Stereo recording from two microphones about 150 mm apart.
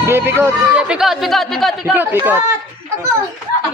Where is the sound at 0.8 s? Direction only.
5° right (ahead or behind).